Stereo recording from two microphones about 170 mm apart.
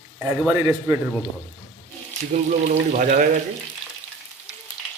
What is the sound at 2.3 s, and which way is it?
Speech, 45° right (ahead or behind).